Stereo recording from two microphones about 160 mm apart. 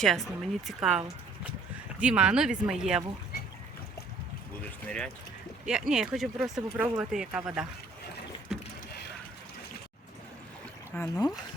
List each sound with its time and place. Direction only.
0.0 s speech: centre (ahead or behind)
4.9 s speech: 5° left (ahead or behind)
8.5 s rowboat: 5° right (ahead or behind)
10.9 s speech: 15° left (ahead or behind)